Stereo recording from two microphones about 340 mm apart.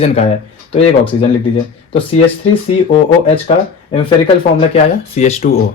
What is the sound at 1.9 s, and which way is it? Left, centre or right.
Speech, centre.